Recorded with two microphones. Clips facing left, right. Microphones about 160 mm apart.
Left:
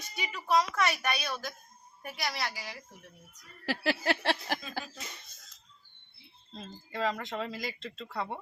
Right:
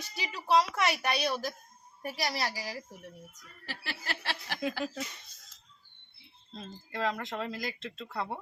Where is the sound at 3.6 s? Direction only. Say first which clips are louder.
Left 12 dB; 70° left (ahead or behind).